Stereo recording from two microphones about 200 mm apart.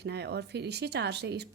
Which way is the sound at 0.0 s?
55° right (ahead or behind).